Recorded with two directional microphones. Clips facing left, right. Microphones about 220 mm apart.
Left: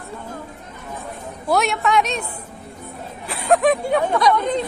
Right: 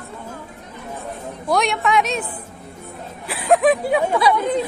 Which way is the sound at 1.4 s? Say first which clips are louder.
Even; 5° left (ahead or behind).